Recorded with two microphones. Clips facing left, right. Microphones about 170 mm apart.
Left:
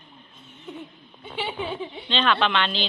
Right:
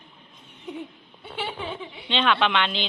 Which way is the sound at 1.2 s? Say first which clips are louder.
Left 1 dB; centre (ahead or behind).